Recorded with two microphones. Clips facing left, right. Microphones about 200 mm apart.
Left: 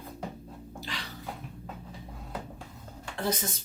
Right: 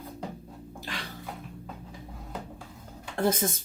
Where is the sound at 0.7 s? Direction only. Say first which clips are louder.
Right 1 dB; 50° right (ahead or behind).